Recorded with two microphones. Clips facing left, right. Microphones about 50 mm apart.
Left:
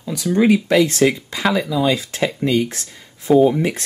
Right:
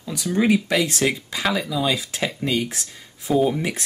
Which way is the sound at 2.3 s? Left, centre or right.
Centre.